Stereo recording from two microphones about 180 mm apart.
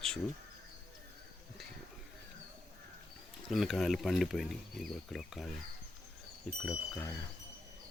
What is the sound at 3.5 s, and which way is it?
Speech, centre (ahead or behind).